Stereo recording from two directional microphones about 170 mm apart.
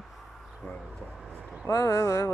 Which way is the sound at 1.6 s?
20° left (ahead or behind).